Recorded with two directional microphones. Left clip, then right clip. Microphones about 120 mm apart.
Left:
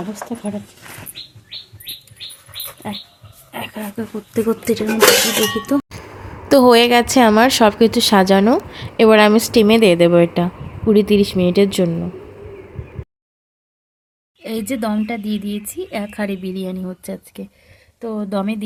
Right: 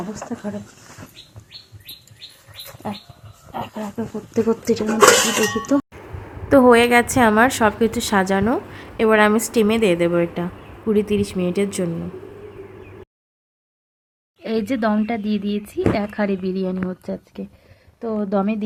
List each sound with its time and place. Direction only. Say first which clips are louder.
0.1 s speech: left 3 dB; 40° left (ahead or behind)
2.8 s speech: left 1 dB; 10° left (ahead or behind)
3.5 s a sound: left 1 dB; 15° left (ahead or behind)
4.4 s a woman's voice: left 1 dB; 25° left (ahead or behind)
6.5 s a woman's voice: left 2 dB; 50° left (ahead or behind)
14.4 s speech: right 1 dB; 15° left (ahead or behind)
17.0 s a woman's voice: even; 20° left (ahead or behind)